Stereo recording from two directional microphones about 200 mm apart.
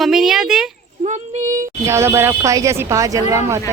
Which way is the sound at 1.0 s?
40° right (ahead or behind).